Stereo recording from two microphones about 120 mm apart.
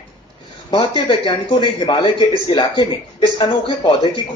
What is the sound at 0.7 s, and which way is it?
A man's voice, 50° left (ahead or behind).